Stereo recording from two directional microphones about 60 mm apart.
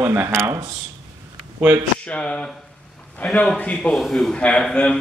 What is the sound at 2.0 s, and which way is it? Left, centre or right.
Speech, left.